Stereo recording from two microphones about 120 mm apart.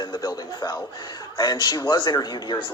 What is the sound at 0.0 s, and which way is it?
A man's voice, 40° left (ahead or behind).